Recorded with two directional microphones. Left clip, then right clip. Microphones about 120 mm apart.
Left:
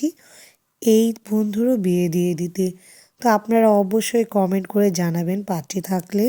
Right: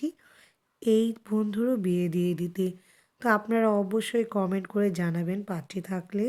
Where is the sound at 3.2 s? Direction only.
30° left (ahead or behind).